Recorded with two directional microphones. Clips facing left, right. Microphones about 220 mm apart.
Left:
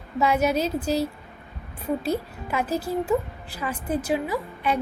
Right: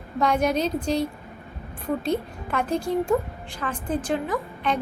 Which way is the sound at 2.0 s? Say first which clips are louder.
Right 1 dB; 5° left (ahead or behind).